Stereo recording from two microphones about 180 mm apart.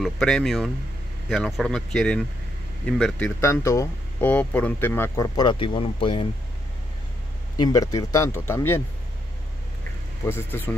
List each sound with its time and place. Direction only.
0.0 s speech: centre (ahead or behind); by 6.2 s 30° left (ahead or behind)
7.6 s speech: 20° left (ahead or behind)
10.2 s speech: 10° left (ahead or behind)